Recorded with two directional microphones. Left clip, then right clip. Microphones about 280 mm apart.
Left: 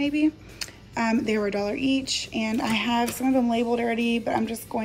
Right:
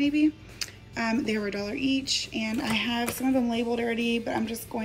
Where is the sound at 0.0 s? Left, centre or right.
Centre.